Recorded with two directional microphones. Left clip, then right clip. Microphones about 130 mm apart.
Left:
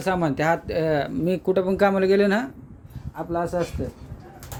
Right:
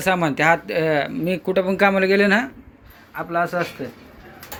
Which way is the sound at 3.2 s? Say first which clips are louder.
Right 4 dB; 20° left (ahead or behind).